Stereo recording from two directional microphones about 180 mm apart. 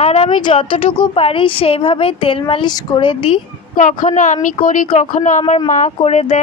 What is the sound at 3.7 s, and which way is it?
Speech, 45° left (ahead or behind).